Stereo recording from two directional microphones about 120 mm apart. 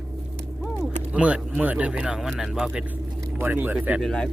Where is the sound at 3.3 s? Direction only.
15° right (ahead or behind).